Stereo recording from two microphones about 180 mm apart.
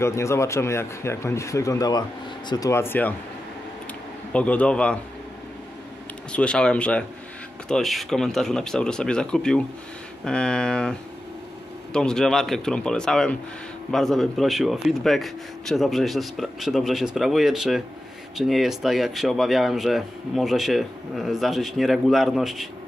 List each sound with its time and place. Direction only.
0.0 s speech: 15° left (ahead or behind)
4.3 s speech: 5° left (ahead or behind)
6.3 s speech: 5° left (ahead or behind)